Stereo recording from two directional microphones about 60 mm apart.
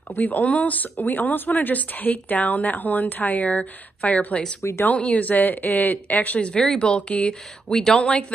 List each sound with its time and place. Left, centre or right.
0.1 s speech: left
4.6 s speech: left
4.8 s speech: left
6.5 s speech: centre